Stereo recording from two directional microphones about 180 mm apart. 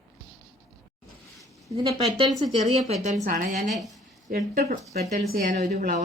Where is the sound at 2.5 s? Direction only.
35° right (ahead or behind); by 5.9 s 55° right (ahead or behind).